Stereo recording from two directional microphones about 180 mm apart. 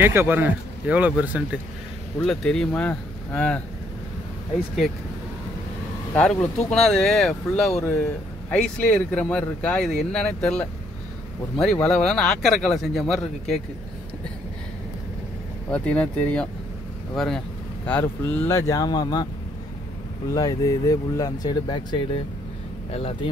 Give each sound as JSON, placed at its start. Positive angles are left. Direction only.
{"t": 0.0, "sound": "speech", "side_deg": -10}
{"t": 6.1, "sound": "speech", "side_deg": 5}
{"t": 15.7, "sound": "speech", "side_deg": 5}
{"t": 20.3, "sound": "speech", "side_deg": 20}